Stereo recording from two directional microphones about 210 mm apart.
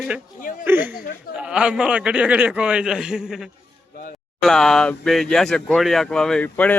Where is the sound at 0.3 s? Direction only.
40° left (ahead or behind).